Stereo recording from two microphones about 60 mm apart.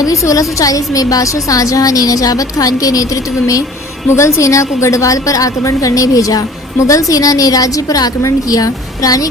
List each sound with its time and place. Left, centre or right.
0.0 s a woman's voice: left
4.1 s a woman's voice: left